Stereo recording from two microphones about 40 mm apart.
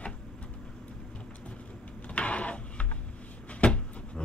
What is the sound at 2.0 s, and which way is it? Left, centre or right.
Printer, left.